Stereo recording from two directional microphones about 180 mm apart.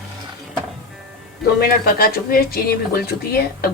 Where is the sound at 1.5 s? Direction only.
55° left (ahead or behind).